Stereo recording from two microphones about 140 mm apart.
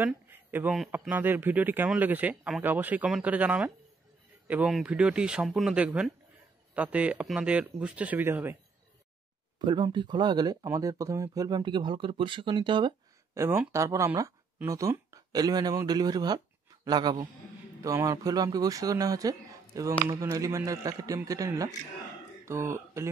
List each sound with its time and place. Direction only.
0.0 s a sound: 15° right (ahead or behind)
0.9 s speech: 10° right (ahead or behind)
9.6 s speech: 30° right (ahead or behind)
13.3 s speech: 20° right (ahead or behind)